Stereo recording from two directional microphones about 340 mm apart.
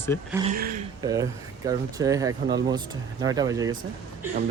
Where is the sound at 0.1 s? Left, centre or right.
Centre.